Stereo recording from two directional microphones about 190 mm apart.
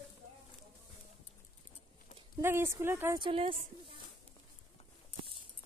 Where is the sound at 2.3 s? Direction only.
15° right (ahead or behind).